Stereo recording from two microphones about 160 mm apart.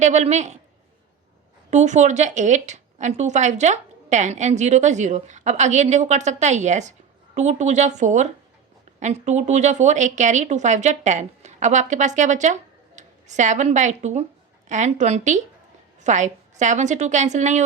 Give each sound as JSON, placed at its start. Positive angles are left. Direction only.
{"t": 0.0, "sound": "a woman's voice", "side_deg": -45}
{"t": 1.7, "sound": "a woman's voice", "side_deg": -50}